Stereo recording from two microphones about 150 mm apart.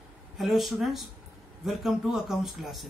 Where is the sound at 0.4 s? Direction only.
Centre (ahead or behind).